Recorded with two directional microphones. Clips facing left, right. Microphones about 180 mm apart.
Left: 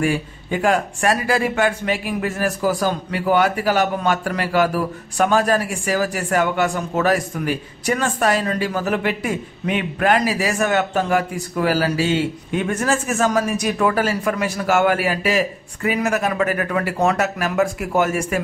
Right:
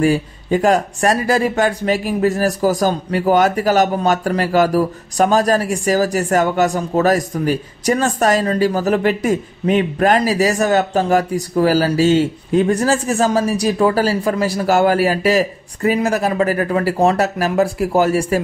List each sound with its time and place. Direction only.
0.0 s speech: 40° right (ahead or behind)